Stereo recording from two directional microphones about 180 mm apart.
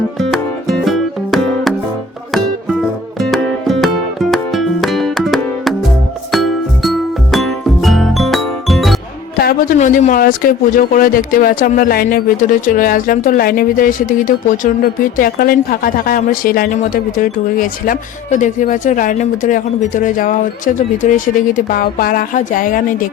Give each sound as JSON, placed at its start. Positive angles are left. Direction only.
{"t": 0.2, "sound": "music", "side_deg": 0}
{"t": 3.2, "sound": "music", "side_deg": 0}
{"t": 9.4, "sound": "speech", "side_deg": 50}